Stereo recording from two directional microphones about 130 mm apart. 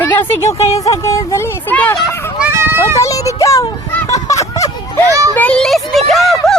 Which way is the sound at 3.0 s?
25° left (ahead or behind).